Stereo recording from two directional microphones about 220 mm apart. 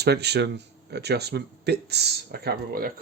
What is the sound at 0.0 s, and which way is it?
Speech, 50° right (ahead or behind).